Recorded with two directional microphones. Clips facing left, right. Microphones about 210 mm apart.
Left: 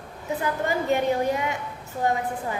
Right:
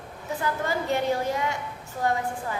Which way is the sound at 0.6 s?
15° left (ahead or behind).